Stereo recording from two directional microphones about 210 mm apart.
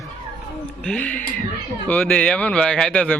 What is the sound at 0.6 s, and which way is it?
Speech, 5° left (ahead or behind).